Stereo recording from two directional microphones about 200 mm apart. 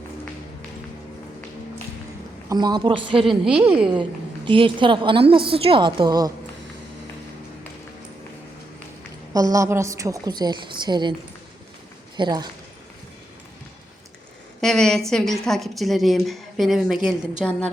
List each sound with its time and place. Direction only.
2.5 s a woman's voice: 20° right (ahead or behind)
3.2 s a woman's voice: 5° right (ahead or behind)
4.4 s a woman's voice: 25° right (ahead or behind)
9.3 s a woman's voice: 15° right (ahead or behind)
12.1 s speech: 20° right (ahead or behind)
14.6 s a woman's voice: centre (ahead or behind)